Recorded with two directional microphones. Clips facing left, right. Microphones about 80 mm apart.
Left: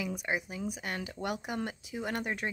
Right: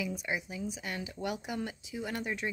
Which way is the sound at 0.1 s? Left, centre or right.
Left.